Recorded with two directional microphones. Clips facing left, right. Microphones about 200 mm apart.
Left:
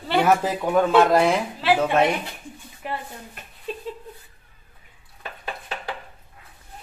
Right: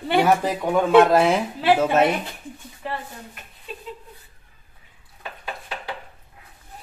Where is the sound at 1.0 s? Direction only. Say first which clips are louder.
Right 1 dB; centre (ahead or behind).